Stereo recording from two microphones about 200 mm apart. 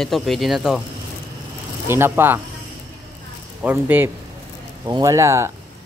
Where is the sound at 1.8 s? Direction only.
10° right (ahead or behind).